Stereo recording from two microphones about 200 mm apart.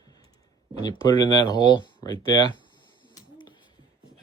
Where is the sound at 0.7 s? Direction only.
20° left (ahead or behind).